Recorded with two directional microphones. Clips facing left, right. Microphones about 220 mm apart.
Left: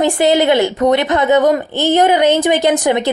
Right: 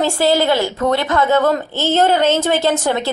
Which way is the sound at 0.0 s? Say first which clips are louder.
Left 3 dB; 20° left (ahead or behind).